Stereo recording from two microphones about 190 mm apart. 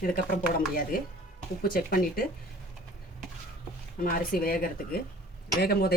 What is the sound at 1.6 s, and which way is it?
Speech, 50° left (ahead or behind).